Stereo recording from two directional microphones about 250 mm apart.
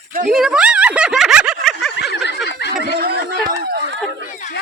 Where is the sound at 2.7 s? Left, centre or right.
Right.